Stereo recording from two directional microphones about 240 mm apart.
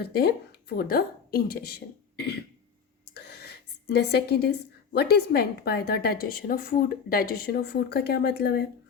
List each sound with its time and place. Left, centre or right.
0.0 s a woman's voice: left